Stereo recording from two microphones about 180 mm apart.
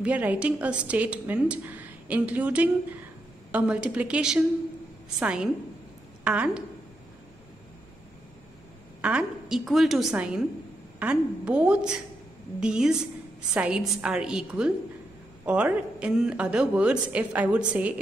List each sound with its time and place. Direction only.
0.0 s a woman's voice: 10° right (ahead or behind)
9.0 s a woman's voice: 5° right (ahead or behind)